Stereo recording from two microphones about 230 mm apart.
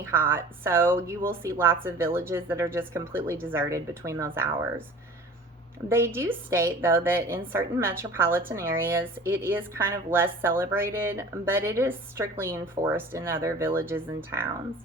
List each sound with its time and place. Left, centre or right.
0.0 s a woman's voice: centre
5.9 s a woman's voice: centre